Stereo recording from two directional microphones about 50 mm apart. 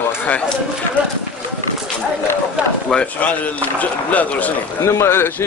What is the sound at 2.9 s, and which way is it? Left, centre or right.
Speech, centre.